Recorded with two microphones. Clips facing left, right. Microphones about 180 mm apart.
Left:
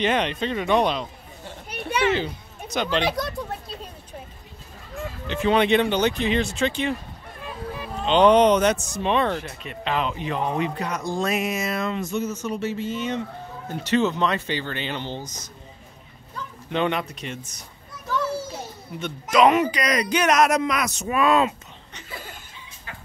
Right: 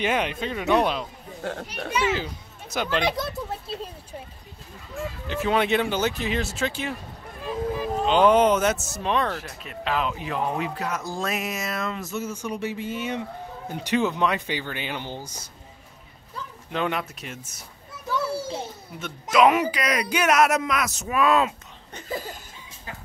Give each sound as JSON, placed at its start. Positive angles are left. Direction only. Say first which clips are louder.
{"t": 0.0, "sound": "speech", "louder": "left 2 dB", "side_deg": -10}
{"t": 1.4, "sound": "a child's voice", "louder": "right 10 dB", "side_deg": -75}
{"t": 1.9, "sound": "a child's voice", "louder": "left 3 dB", "side_deg": 60}
{"t": 2.7, "sound": "speech", "louder": "left 1 dB", "side_deg": -5}
{"t": 5.2, "sound": "speech", "louder": "left 3 dB", "side_deg": -5}
{"t": 8.0, "sound": "speech", "louder": "left 2 dB", "side_deg": -5}
{"t": 16.7, "sound": "speech", "louder": "left 3 dB", "side_deg": -5}
{"t": 18.9, "sound": "speech", "louder": "left 1 dB", "side_deg": -5}
{"t": 21.9, "sound": "chuckle", "louder": "right 7 dB", "side_deg": -40}